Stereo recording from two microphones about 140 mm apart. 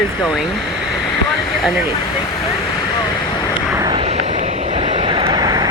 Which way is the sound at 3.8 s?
30° right (ahead or behind).